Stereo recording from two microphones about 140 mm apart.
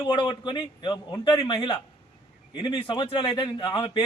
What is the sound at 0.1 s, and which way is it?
Speech, 35° left (ahead or behind).